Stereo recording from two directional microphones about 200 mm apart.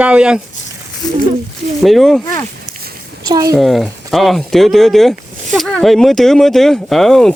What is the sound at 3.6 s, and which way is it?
Speech, centre (ahead or behind).